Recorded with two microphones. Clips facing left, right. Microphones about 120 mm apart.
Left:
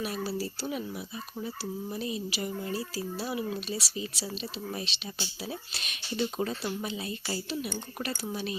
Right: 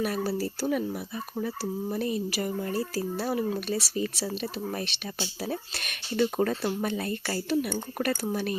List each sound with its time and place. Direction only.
0.0 s speech: 50° right (ahead or behind)